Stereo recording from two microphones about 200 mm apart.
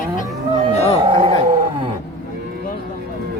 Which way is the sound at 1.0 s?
25° right (ahead or behind).